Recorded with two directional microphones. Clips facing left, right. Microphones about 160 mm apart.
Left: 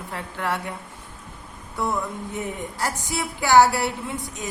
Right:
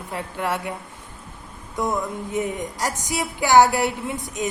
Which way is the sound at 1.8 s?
20° right (ahead or behind).